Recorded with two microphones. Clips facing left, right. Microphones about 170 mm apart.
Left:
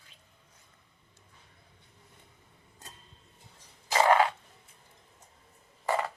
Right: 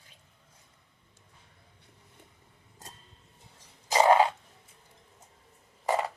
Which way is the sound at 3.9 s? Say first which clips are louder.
Right 2 dB; 20° right (ahead or behind).